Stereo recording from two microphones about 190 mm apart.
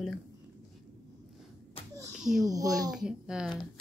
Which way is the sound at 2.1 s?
Centre (ahead or behind).